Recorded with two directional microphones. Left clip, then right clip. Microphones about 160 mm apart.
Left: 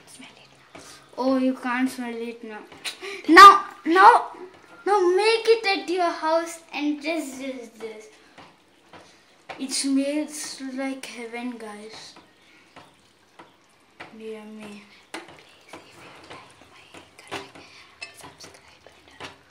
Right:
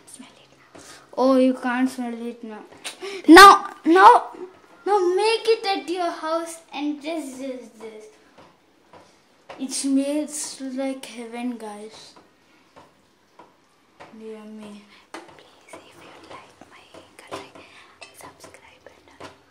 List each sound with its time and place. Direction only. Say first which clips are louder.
0.2 s a sound: left 1 dB; 30° right (ahead or behind)
0.7 s speech: right 7 dB; 70° right (ahead or behind)
3.8 s speech: right 2 dB; 40° right (ahead or behind)
4.8 s a child's voice: even; 15° right (ahead or behind)
9.9 s a child's voice: right 4 dB; 35° right (ahead or behind)